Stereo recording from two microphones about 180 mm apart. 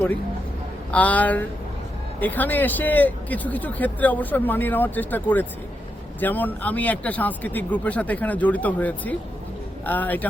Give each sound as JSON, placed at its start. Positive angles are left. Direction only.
{"t": 0.9, "sound": "speech", "side_deg": 10}